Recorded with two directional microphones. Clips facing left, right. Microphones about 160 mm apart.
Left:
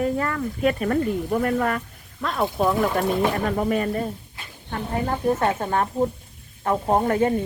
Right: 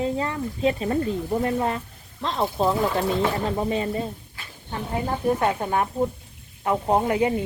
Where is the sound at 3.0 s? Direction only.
15° left (ahead or behind).